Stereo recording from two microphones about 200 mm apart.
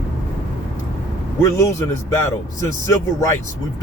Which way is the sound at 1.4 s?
15° left (ahead or behind).